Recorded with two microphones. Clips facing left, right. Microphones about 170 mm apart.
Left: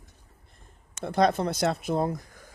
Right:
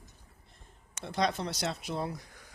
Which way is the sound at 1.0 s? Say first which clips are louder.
Left 8 dB; 55° left (ahead or behind).